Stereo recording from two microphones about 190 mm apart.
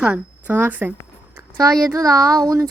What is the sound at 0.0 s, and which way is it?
A woman's voice, 5° right (ahead or behind).